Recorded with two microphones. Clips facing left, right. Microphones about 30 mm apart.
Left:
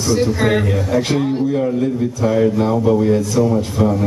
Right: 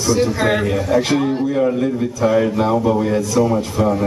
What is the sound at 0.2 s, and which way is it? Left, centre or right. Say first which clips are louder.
A man's voice: even; centre.